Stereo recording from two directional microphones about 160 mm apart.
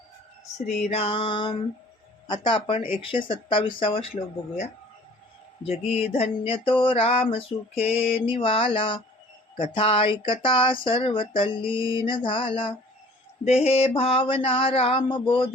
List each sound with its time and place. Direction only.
0.9 s speech: 40° left (ahead or behind)
5.8 s speech: 40° left (ahead or behind)